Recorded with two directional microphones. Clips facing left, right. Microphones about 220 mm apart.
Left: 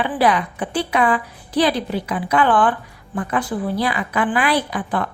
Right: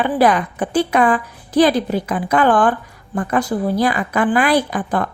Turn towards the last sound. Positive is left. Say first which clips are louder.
# right 3 dB
turn(degrees=-45)  # may be behind; listen again after turning